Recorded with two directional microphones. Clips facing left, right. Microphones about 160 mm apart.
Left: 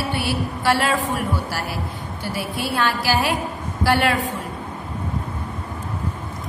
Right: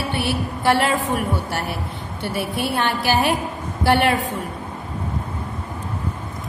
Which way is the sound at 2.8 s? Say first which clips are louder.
Right 1 dB; 20° right (ahead or behind).